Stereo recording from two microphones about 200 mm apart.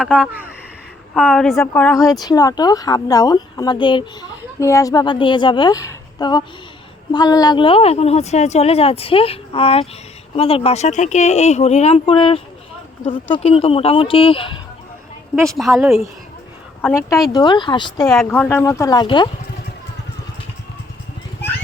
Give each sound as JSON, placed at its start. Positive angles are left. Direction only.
{"t": 0.2, "sound": "a woman's voice", "side_deg": -10}
{"t": 1.5, "sound": "speech", "side_deg": 10}
{"t": 2.0, "sound": "speech", "side_deg": 20}
{"t": 15.5, "sound": "a woman's voice", "side_deg": 0}
{"t": 17.3, "sound": "speech", "side_deg": 20}
{"t": 18.1, "sound": "speech", "side_deg": 5}